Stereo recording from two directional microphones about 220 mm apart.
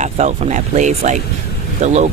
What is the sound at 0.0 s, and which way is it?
Speech, 35° right (ahead or behind).